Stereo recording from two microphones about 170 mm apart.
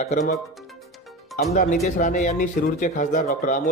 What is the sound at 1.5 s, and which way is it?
Speech, 55° left (ahead or behind).